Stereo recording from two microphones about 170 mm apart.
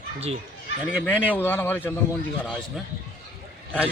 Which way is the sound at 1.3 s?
10° left (ahead or behind).